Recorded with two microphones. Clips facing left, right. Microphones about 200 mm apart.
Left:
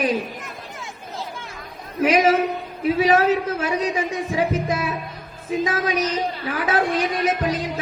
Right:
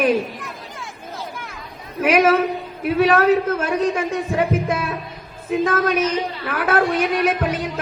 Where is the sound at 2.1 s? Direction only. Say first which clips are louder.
Right 3 dB; 60° right (ahead or behind).